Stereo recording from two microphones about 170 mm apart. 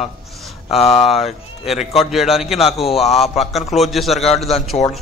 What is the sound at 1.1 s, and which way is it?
A man's voice, centre (ahead or behind).